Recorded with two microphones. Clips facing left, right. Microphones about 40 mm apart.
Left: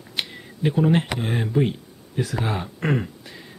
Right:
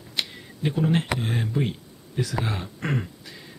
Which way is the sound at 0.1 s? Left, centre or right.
Centre.